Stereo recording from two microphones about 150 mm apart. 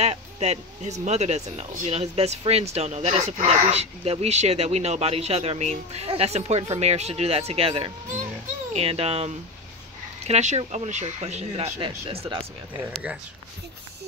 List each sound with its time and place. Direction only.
0.0 s speech: 45° right (ahead or behind)
11.8 s speech: 35° right (ahead or behind)